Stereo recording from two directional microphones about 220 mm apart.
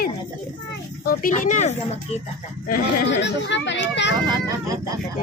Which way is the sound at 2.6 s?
40° left (ahead or behind).